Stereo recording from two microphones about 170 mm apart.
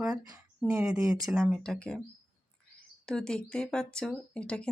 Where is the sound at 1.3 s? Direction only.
5° right (ahead or behind).